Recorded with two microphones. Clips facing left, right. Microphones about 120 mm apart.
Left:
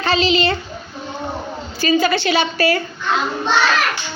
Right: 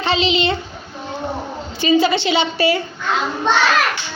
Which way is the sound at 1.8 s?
20° right (ahead or behind).